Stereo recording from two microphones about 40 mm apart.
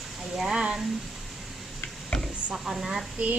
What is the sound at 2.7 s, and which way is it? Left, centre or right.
Speech, centre.